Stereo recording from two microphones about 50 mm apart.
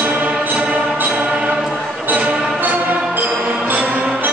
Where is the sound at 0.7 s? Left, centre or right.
Right.